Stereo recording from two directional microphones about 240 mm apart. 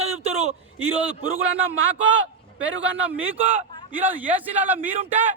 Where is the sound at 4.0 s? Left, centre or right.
Centre.